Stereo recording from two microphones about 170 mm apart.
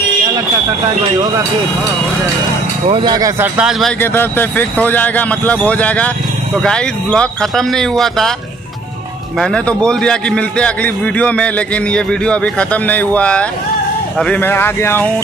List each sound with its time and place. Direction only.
2.9 s speech: 25° right (ahead or behind)
3.5 s speech: 5° right (ahead or behind)
4.0 s a man's voice: 10° left (ahead or behind)
9.4 s a man's voice: 5° left (ahead or behind)